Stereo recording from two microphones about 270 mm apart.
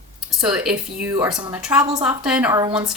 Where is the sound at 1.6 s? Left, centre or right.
Centre.